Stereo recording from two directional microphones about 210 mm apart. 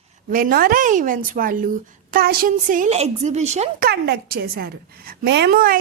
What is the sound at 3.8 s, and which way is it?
A woman's voice, 50° right (ahead or behind).